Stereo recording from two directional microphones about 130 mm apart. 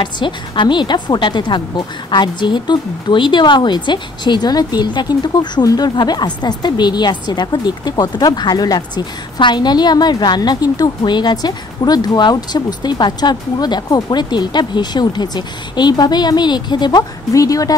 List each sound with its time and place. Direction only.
0.0 s a woman's voice: 35° left (ahead or behind)